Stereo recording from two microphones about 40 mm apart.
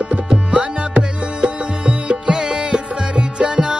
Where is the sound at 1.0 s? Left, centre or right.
Right.